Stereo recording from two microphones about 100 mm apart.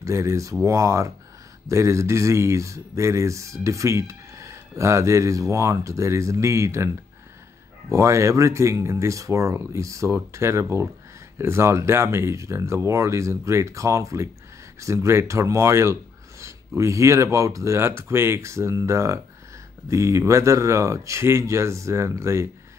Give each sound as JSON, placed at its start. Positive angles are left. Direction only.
{"t": 0.0, "sound": "speech", "side_deg": -30}
{"t": 7.9, "sound": "speech", "side_deg": -30}